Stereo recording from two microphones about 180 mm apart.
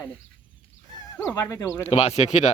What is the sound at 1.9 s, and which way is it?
Speech, 35° left (ahead or behind).